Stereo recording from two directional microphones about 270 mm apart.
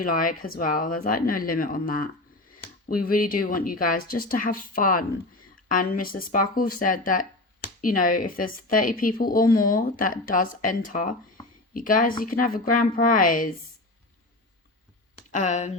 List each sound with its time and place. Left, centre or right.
0.0 s speech: left
15.3 s speech: left